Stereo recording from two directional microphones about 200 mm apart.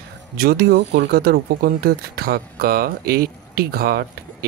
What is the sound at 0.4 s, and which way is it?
Speech, 50° right (ahead or behind).